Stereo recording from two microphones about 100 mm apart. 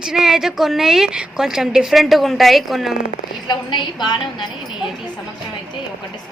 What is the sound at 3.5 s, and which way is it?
Speech, 50° left (ahead or behind).